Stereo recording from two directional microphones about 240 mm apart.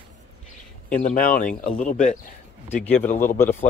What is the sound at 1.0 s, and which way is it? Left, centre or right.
Speech, left.